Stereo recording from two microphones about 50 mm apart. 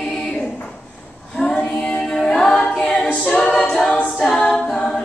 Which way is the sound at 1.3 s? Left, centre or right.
Centre.